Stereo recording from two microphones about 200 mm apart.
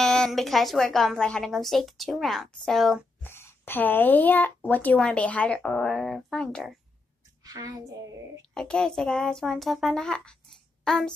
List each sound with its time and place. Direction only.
0.0 s a woman's voice: centre (ahead or behind)
3.3 s a woman's voice: 10° left (ahead or behind)
7.4 s a woman's voice: 15° right (ahead or behind)
8.5 s a woman's voice: 5° left (ahead or behind)